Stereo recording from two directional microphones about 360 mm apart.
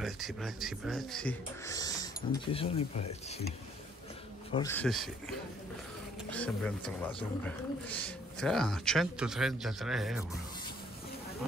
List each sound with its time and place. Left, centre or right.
0.0 s speech: centre
4.5 s speech: centre
6.3 s speech: centre